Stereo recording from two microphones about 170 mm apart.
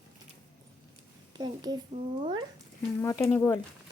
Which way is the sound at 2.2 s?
25° right (ahead or behind).